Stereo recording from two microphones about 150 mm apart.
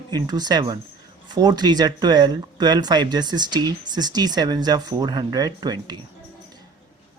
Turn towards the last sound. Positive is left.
turn(degrees=-25)  # may be behind; listen again after turning